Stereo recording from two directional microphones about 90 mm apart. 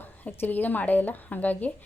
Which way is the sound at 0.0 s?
25° left (ahead or behind).